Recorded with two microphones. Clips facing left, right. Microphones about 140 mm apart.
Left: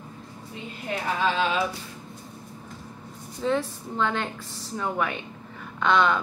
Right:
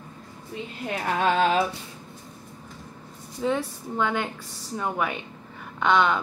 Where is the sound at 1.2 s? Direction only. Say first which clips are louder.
Right 4 dB; 50° right (ahead or behind).